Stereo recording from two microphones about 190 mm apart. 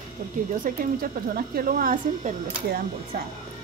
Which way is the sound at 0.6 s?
50° right (ahead or behind).